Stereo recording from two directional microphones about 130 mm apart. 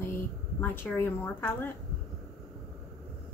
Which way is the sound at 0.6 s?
15° left (ahead or behind).